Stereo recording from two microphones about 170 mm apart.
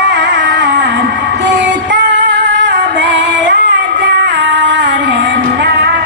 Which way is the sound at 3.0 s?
90° right.